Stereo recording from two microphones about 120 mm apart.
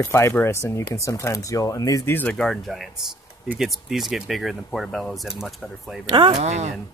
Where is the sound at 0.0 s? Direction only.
25° left (ahead or behind).